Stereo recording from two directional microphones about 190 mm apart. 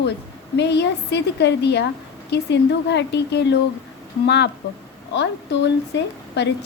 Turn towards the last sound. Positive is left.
turn(degrees=65)  # may be behind; listen again after turning